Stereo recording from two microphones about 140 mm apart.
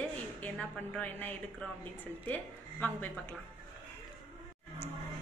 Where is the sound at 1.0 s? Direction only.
10° left (ahead or behind).